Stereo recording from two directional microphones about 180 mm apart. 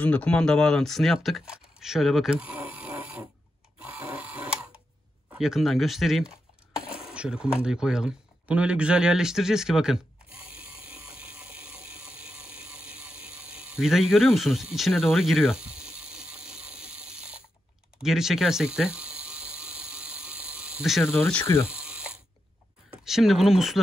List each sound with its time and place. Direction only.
0.0 s speech: 5° left (ahead or behind)
3.8 s printer: 10° right (ahead or behind)
5.4 s speech: centre (ahead or behind)
10.7 s a sound: 30° left (ahead or behind)
11.1 s a sound: 5° right (ahead or behind)
12.6 s ratchet: 5° right (ahead or behind)
17.9 s a sound: centre (ahead or behind)
21.0 s speech: 15° left (ahead or behind)
21.6 s ratchet: 5° right (ahead or behind)
22.8 s speech: centre (ahead or behind)